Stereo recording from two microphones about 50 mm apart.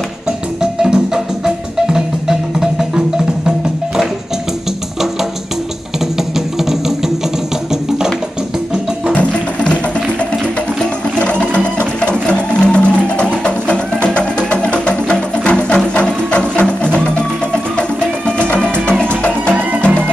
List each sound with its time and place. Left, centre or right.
0.6 s music: centre
9.1 s music: left
11.1 s music: left